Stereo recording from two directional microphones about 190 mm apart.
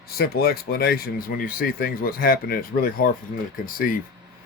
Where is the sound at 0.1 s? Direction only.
55° left (ahead or behind).